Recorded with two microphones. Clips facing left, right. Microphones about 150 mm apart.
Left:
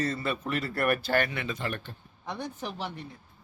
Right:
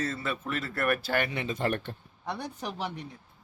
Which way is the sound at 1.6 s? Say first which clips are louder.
Right 5 dB; 60° right (ahead or behind).